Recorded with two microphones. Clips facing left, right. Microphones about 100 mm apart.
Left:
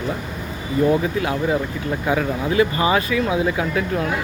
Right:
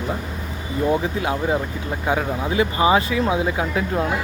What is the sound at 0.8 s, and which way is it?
Speech, 20° right (ahead or behind).